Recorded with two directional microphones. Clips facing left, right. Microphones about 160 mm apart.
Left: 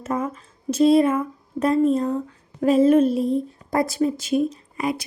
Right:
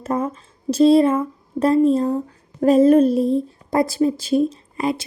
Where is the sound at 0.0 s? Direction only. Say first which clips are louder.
Right 3 dB; 35° right (ahead or behind).